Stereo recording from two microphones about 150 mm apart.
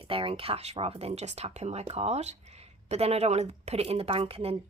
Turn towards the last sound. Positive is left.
turn(degrees=-40)  # may be behind; listen again after turning